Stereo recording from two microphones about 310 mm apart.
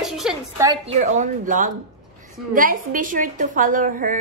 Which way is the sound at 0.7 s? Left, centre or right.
Right.